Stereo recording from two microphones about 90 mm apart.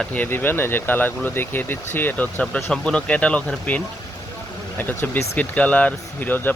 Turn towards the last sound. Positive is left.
turn(degrees=20)  # may be behind; listen again after turning